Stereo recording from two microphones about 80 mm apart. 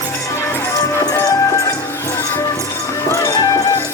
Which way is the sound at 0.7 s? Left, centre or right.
Left.